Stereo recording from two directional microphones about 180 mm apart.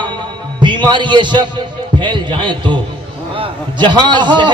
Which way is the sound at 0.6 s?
25° right (ahead or behind).